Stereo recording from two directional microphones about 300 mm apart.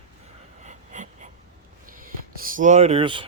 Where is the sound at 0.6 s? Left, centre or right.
Right.